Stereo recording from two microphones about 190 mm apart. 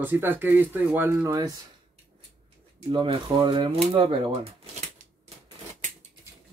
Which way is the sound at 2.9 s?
25° right (ahead or behind).